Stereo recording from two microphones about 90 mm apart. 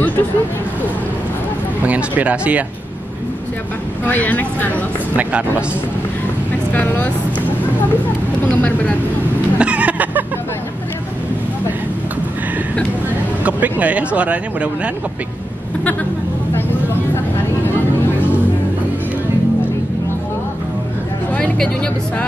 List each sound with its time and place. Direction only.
1.9 s speech: 15° right (ahead or behind)
4.1 s speech: 20° left (ahead or behind)
5.1 s speech: 15° right (ahead or behind)
6.7 s vehicle: 20° left (ahead or behind)
8.5 s vehicle: 15° left (ahead or behind)
9.6 s vehicle: 15° right (ahead or behind)
13.4 s speech: 15° right (ahead or behind)